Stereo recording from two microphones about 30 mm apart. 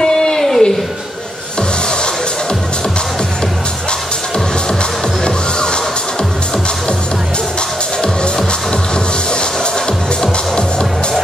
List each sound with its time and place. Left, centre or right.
0.0 s a sound: left
5.2 s music: left
10.2 s music: left